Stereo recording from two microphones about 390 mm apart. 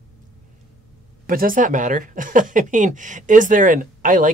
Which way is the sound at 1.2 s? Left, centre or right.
Right.